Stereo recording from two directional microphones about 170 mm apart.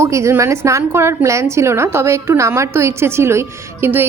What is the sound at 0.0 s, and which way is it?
A woman's voice, 15° right (ahead or behind).